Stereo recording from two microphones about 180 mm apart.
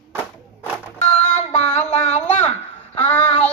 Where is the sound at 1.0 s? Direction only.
40° left (ahead or behind).